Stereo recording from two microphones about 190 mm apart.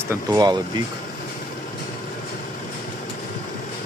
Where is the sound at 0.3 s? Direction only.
20° right (ahead or behind).